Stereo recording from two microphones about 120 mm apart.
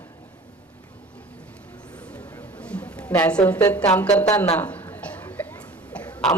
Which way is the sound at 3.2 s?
10° left (ahead or behind).